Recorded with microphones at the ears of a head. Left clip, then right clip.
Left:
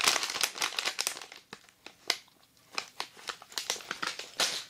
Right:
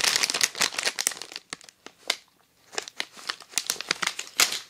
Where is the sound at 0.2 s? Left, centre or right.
Right.